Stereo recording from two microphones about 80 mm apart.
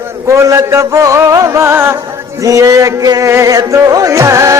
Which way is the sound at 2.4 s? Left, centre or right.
Right.